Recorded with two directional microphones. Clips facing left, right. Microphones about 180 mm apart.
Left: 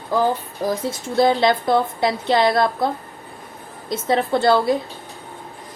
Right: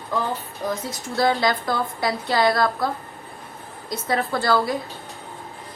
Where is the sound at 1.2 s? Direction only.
25° left (ahead or behind).